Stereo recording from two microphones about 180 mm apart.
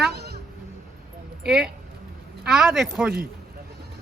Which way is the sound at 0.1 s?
65° right (ahead or behind).